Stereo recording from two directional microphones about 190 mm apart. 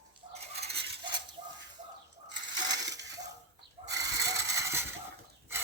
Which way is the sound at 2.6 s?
70° right (ahead or behind).